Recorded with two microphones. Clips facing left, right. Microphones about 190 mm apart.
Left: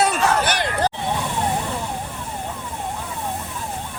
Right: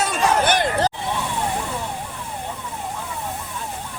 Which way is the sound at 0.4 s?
50° right (ahead or behind).